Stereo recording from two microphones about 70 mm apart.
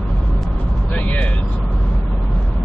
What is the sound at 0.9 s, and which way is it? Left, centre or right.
Vehicle, left.